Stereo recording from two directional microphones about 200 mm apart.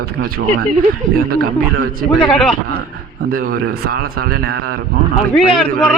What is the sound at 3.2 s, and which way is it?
A man's voice, 45° right (ahead or behind).